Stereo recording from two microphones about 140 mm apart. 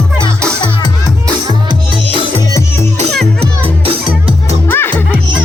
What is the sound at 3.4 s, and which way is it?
Music, 40° right (ahead or behind).